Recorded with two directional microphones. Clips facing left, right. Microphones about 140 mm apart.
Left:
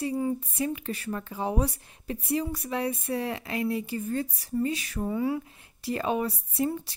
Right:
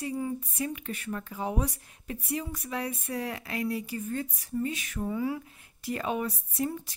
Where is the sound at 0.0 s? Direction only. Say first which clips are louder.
Left 4 dB; 30° left (ahead or behind).